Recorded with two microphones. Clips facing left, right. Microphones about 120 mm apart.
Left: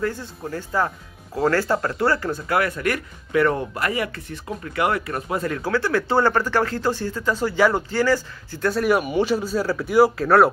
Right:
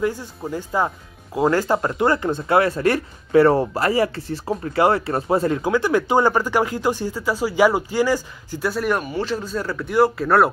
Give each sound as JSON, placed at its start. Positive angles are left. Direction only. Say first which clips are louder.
{"t": 0.0, "sound": "speech", "louder": "right 3 dB", "side_deg": -15}
{"t": 5.6, "sound": "speech", "louder": "right 3 dB", "side_deg": -15}
{"t": 8.8, "sound": "speech", "louder": "left 3 dB", "side_deg": 10}